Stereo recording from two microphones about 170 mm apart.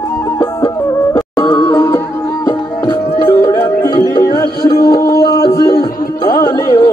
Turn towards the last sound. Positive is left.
turn(degrees=20)  # may be behind; listen again after turning